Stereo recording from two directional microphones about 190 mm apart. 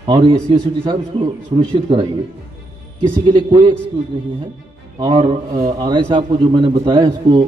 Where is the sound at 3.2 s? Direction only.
25° right (ahead or behind).